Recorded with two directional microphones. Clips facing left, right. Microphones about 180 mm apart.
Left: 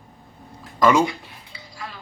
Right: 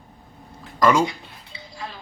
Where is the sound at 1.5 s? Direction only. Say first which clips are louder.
Right 2 dB; 20° right (ahead or behind).